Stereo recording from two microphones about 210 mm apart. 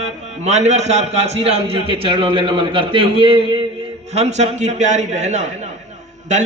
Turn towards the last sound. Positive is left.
turn(degrees=-35)  # may be behind; listen again after turning